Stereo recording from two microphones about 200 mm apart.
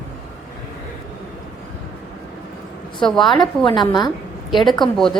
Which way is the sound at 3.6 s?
20° left (ahead or behind).